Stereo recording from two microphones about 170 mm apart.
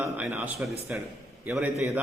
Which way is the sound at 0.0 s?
10° right (ahead or behind).